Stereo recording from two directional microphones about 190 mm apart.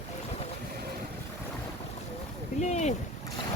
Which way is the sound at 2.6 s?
35° left (ahead or behind).